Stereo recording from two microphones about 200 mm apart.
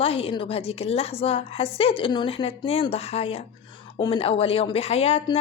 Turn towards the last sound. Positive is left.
turn(degrees=30)  # may be behind; listen again after turning